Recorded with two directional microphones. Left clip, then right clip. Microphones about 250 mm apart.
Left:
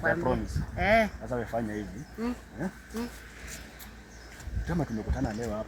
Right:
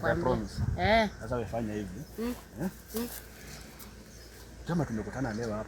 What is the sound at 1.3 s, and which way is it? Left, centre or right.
Speech, centre.